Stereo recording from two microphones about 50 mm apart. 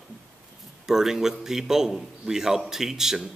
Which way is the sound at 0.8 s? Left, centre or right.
Centre.